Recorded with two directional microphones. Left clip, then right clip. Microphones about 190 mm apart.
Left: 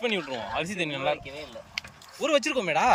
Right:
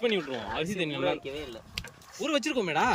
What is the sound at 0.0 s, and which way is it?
Speech, 10° right (ahead or behind).